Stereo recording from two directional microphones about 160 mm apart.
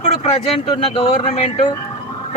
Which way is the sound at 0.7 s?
30° left (ahead or behind).